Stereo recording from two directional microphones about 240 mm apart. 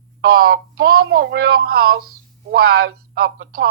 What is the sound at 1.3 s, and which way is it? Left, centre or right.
Speech, right.